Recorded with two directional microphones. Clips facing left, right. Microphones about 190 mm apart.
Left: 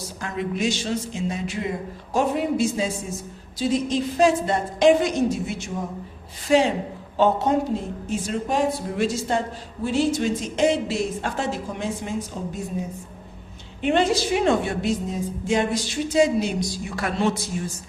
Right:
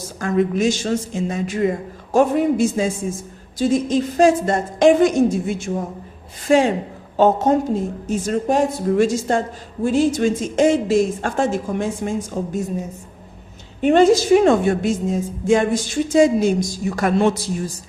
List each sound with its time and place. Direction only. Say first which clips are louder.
0.2 s a woman's voice: right 8 dB; 45° right (ahead or behind)
13.8 s a woman's voice: right 7 dB; 45° right (ahead or behind)
17.3 s a man's voice: right 4 dB; 35° right (ahead or behind)